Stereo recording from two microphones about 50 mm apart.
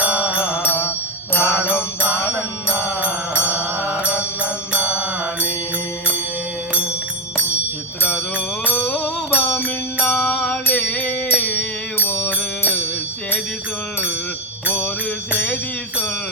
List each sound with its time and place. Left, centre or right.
0.0 s mantra: right
0.6 s music: left
3.0 s mantra: right
4.7 s mantra: right
8.9 s mantra: left
10.2 s music: left
14.7 s mantra: left